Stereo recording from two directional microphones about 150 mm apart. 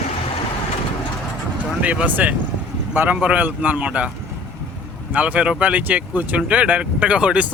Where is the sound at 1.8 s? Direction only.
10° right (ahead or behind).